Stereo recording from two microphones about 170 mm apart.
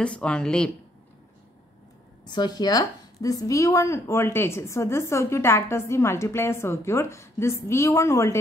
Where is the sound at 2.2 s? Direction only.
25° left (ahead or behind).